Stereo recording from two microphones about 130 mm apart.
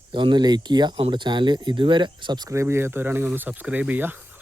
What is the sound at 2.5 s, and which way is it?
Speech, 20° right (ahead or behind).